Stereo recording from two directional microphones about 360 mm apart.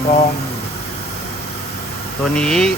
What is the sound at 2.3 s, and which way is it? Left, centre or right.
Speech, centre.